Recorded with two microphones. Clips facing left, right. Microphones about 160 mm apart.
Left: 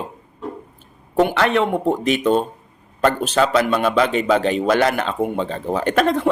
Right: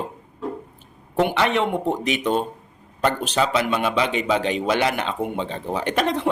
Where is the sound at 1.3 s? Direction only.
15° right (ahead or behind).